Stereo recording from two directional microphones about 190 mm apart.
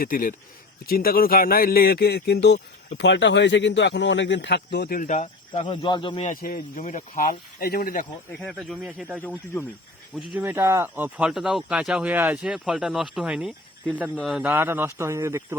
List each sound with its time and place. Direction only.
0.0 s speech: 45° left (ahead or behind); by 6.3 s 30° left (ahead or behind)
6.3 s speech: 50° left (ahead or behind)
8.4 s speech: centre (ahead or behind)
10.4 s speech: 15° right (ahead or behind)